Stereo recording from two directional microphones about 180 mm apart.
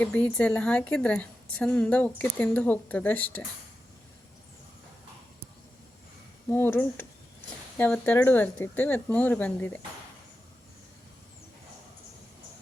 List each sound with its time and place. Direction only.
0.0 s a woman's voice: 5° left (ahead or behind)
6.5 s a woman's voice: 10° left (ahead or behind)